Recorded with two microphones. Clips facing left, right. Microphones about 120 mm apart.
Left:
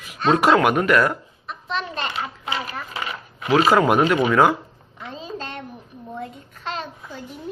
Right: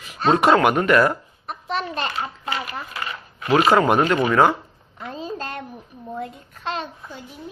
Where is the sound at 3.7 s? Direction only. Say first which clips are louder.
Even; 5° left (ahead or behind).